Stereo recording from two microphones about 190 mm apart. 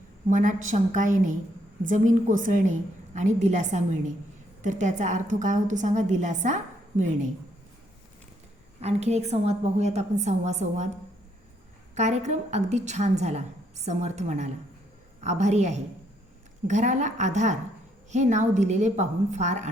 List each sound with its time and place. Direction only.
0.3 s a woman's voice: 40° right (ahead or behind)
8.8 s a woman's voice: 35° right (ahead or behind)
11.9 s a woman's voice: 35° right (ahead or behind)